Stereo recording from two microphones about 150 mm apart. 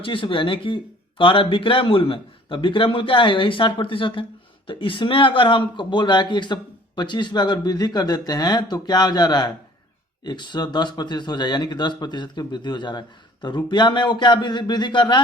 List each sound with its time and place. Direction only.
0.0 s a man's voice: 35° left (ahead or behind)